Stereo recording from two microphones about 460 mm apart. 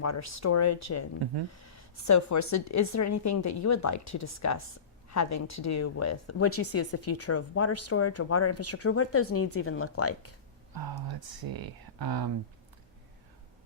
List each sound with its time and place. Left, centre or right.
0.0 s speech: left
10.8 s speech: right